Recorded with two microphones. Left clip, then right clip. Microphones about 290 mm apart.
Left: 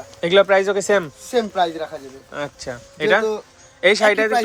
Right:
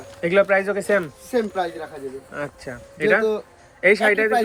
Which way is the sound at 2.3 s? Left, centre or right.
Centre.